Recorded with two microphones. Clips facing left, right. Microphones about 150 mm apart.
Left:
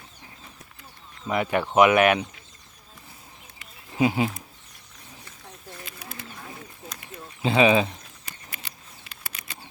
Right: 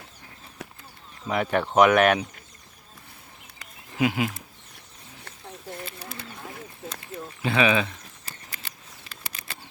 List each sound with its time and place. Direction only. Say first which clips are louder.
1.3 s speech: even; 5° left (ahead or behind)
3.9 s speech: left 2 dB; 25° left (ahead or behind)
6.8 s a sound: right 6 dB; 30° right (ahead or behind)
7.4 s speech: left 3 dB; 30° left (ahead or behind)